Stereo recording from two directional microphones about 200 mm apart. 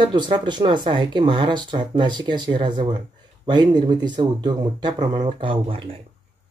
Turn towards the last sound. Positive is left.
turn(degrees=-25)  # may be behind; listen again after turning